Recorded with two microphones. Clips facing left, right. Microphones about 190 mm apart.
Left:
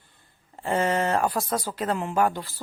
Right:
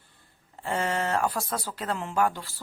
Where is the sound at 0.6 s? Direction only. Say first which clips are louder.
Left 4 dB; 20° left (ahead or behind).